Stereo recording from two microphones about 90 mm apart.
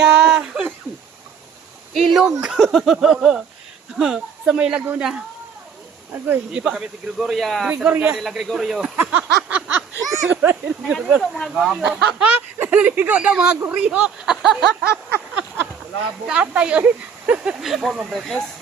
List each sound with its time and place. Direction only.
0.3 s a sound: 5° right (ahead or behind)
1.9 s speech: centre (ahead or behind)
6.2 s speech: 15° right (ahead or behind); by 7.7 s centre (ahead or behind)
7.8 s a sound: 20° right (ahead or behind)
8.1 s speech: 5° right (ahead or behind)
9.0 s a sound: 20° right (ahead or behind)
11.2 s speech: 5° left (ahead or behind)
11.8 s speech: 10° right (ahead or behind)
16.2 s speech: 10° right (ahead or behind); by 18.4 s 5° left (ahead or behind)